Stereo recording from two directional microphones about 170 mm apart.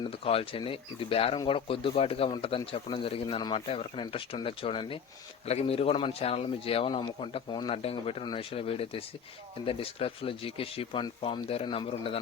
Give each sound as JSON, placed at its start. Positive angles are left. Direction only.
{"t": 0.0, "sound": "speech", "side_deg": 35}